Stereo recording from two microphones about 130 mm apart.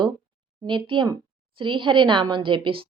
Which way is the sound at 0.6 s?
40° right (ahead or behind).